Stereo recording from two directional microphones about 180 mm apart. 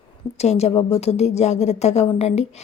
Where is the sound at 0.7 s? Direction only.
25° left (ahead or behind).